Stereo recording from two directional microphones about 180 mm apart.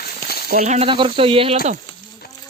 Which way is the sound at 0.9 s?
30° right (ahead or behind).